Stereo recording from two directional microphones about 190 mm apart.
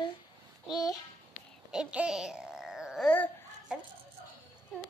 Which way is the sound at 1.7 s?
5° right (ahead or behind).